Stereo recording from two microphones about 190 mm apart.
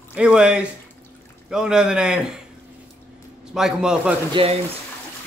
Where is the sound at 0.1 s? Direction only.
5° right (ahead or behind).